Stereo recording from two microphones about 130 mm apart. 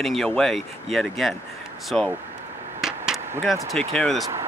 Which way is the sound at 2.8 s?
5° right (ahead or behind).